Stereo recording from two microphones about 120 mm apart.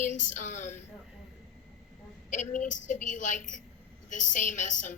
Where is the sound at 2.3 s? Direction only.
90° left.